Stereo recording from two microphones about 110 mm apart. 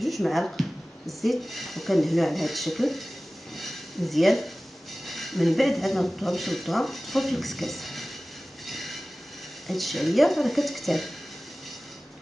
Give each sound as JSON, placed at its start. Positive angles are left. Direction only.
{"t": 0.0, "sound": "speech", "side_deg": 0}
{"t": 8.6, "sound": "train", "side_deg": 0}
{"t": 9.7, "sound": "speech", "side_deg": 0}